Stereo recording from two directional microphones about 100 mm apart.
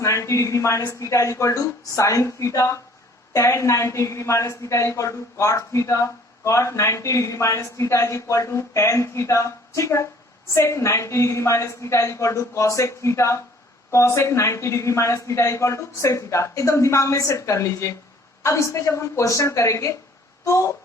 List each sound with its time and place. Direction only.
0.0 s a woman's voice: 30° left (ahead or behind)